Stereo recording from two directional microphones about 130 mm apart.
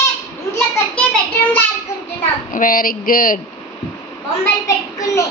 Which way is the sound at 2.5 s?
90° left.